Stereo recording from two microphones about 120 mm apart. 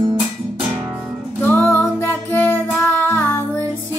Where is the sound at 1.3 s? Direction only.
15° left (ahead or behind).